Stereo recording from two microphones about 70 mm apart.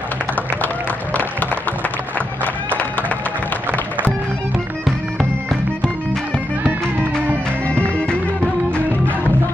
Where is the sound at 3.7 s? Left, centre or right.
Right.